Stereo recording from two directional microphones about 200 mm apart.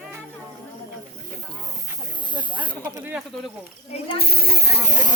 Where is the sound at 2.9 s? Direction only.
10° right (ahead or behind).